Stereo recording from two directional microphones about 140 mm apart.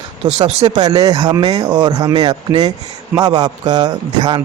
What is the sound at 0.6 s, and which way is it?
A man's voice, 30° right (ahead or behind).